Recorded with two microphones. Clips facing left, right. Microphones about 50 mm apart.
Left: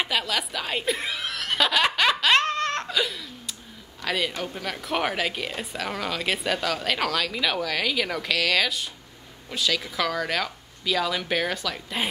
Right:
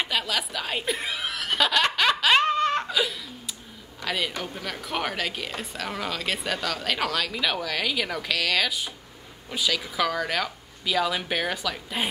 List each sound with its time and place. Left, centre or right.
0.0 s snicker: centre
4.0 s speech: centre